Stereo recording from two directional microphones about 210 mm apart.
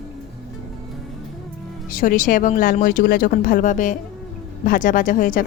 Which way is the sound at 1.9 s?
40° left (ahead or behind).